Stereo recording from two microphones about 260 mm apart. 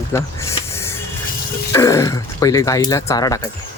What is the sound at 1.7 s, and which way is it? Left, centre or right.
Speech, centre.